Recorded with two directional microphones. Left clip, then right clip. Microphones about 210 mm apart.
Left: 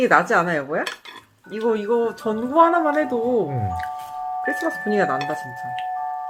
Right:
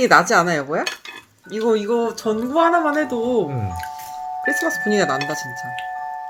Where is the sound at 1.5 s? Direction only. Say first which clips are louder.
Right 2 dB; 30° right (ahead or behind).